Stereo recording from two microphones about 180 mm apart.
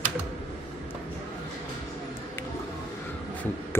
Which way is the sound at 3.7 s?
15° left (ahead or behind).